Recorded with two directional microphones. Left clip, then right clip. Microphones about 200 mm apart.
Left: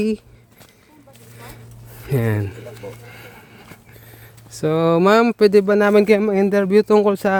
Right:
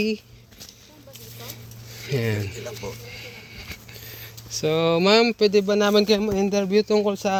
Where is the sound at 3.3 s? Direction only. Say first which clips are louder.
Right 3 dB; 30° left (ahead or behind).